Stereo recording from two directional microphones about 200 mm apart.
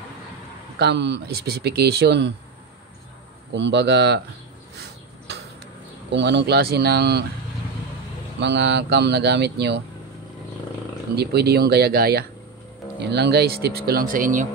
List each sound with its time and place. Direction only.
0.7 s speech: 60° right (ahead or behind)
3.5 s speech: 60° right (ahead or behind)
6.1 s speech: 60° right (ahead or behind)
8.4 s speech: 60° right (ahead or behind)
11.1 s speech: 55° right (ahead or behind)